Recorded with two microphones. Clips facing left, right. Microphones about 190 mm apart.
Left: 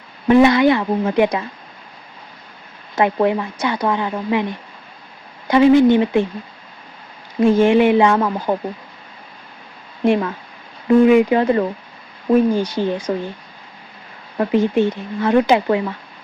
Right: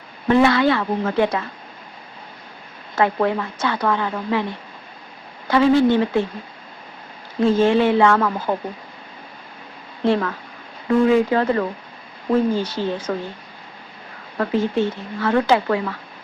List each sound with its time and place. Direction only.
0.3 s speech: 15° left (ahead or behind)
2.9 s speech: 15° left (ahead or behind)
5.5 s speech: 15° left (ahead or behind)
7.4 s speech: 15° left (ahead or behind)
10.0 s speech: 15° left (ahead or behind)
14.3 s speech: 15° left (ahead or behind)